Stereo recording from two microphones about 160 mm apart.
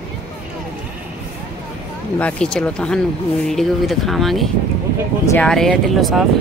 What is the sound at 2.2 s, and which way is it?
A woman's voice, 5° left (ahead or behind).